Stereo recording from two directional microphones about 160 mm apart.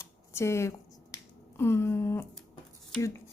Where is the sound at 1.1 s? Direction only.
15° left (ahead or behind).